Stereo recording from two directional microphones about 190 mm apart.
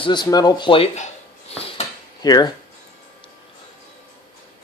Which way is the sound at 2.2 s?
20° left (ahead or behind).